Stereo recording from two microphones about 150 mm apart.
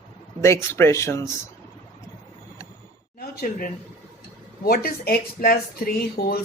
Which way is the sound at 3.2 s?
70° left (ahead or behind).